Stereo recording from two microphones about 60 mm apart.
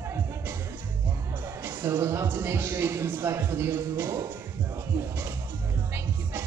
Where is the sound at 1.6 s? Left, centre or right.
Right.